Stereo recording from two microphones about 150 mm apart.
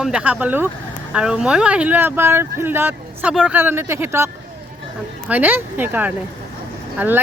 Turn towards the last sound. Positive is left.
turn(degrees=-10)  # may be behind; listen again after turning